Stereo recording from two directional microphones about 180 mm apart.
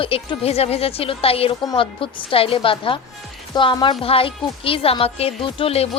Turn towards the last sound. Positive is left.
turn(degrees=35)  # may be behind; listen again after turning